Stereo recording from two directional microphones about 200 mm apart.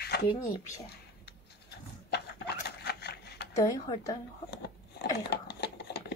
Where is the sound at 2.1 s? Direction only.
55° left (ahead or behind).